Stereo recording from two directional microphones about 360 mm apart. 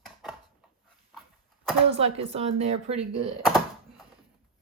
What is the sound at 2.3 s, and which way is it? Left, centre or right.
Speech, centre.